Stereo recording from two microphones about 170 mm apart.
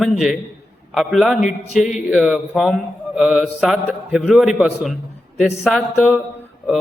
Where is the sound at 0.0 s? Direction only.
Centre (ahead or behind).